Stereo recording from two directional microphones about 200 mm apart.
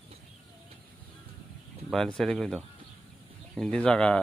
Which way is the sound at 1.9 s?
5° left (ahead or behind).